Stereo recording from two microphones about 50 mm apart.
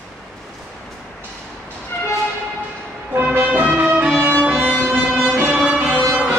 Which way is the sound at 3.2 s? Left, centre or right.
Right.